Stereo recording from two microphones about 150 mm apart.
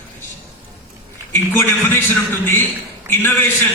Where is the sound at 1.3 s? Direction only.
15° left (ahead or behind).